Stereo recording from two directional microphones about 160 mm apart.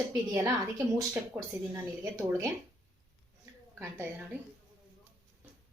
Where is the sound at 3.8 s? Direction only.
10° right (ahead or behind).